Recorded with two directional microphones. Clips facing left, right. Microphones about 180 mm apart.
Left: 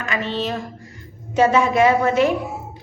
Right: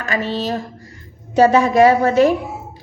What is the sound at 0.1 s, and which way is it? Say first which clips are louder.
A woman's voice: right 3 dB; 40° right (ahead or behind).